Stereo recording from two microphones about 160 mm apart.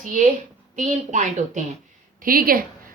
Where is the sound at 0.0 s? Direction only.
55° right (ahead or behind).